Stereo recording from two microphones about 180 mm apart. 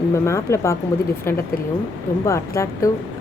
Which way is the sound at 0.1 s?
15° left (ahead or behind).